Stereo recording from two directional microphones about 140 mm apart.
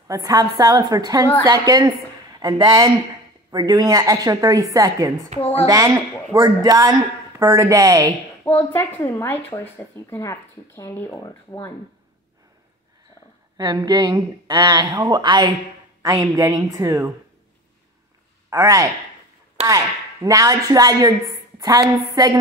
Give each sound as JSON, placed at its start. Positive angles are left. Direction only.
{"t": 0.1, "sound": "a woman's voice", "side_deg": -25}
{"t": 5.4, "sound": "speech", "side_deg": 45}
{"t": 5.7, "sound": "a woman's voice", "side_deg": -25}
{"t": 8.5, "sound": "speech", "side_deg": 10}
{"t": 13.6, "sound": "a woman's voice", "side_deg": -30}
{"t": 18.5, "sound": "a woman's voice", "side_deg": -25}
{"t": 20.2, "sound": "a woman's voice", "side_deg": -25}